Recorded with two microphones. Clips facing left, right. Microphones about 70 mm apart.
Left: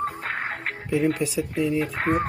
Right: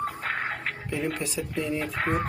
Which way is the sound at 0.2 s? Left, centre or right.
Left.